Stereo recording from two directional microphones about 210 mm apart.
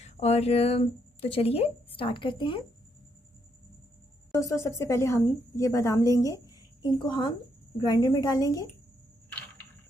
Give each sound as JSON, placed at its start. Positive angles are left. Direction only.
{"t": 0.0, "sound": "speech", "side_deg": 30}
{"t": 4.3, "sound": "a woman's voice", "side_deg": 15}